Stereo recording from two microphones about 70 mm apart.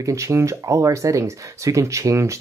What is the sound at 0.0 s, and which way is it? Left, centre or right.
Speech, right.